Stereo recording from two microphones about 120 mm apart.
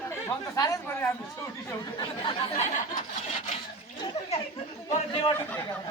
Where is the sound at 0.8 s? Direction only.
15° left (ahead or behind).